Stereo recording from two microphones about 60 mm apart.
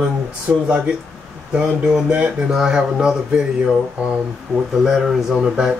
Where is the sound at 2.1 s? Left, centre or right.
Centre.